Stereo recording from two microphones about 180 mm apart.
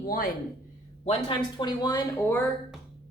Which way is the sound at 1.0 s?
30° left (ahead or behind).